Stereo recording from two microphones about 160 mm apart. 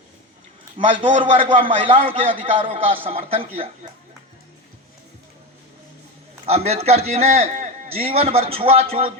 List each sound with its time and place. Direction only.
0.8 s a man's voice: 35° right (ahead or behind)
6.4 s a man's voice: 40° right (ahead or behind)